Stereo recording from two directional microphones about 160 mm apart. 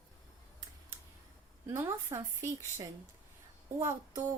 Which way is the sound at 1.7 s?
15° right (ahead or behind).